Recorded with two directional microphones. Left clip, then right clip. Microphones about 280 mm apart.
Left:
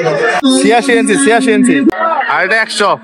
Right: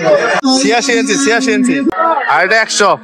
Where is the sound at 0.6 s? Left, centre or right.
Centre.